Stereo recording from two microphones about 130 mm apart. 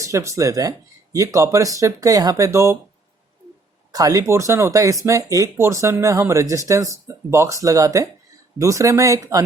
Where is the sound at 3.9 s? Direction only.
30° right (ahead or behind).